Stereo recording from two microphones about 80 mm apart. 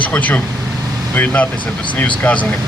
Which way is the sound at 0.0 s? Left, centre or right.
Centre.